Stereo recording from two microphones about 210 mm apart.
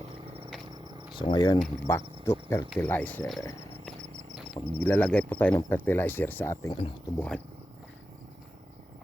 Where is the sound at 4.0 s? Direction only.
30° right (ahead or behind).